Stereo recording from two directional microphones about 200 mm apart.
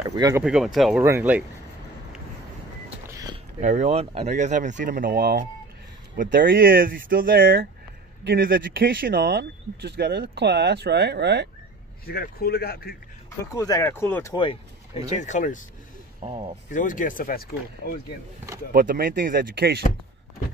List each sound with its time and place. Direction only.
0.1 s speech: 20° right (ahead or behind)
0.4 s speech: 5° right (ahead or behind)
3.1 s a sound: 15° right (ahead or behind)
3.6 s speech: 35° right (ahead or behind); by 11.4 s 55° right (ahead or behind)
12.1 s speech: 50° left (ahead or behind)
13.5 s speech: 15° left (ahead or behind)
14.3 s speech: 25° left (ahead or behind)
15.1 s speech: 40° left (ahead or behind)
16.2 s speech: 25° right (ahead or behind)
16.7 s speech: 40° left (ahead or behind)
18.7 s speech: 45° right (ahead or behind)